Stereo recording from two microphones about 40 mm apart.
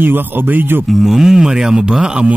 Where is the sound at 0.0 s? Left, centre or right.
Right.